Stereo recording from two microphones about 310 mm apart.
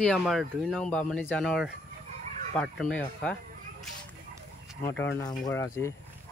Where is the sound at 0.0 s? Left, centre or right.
Centre.